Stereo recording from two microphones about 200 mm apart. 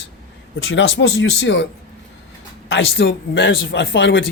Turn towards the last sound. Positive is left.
turn(degrees=70)  # may be behind; listen again after turning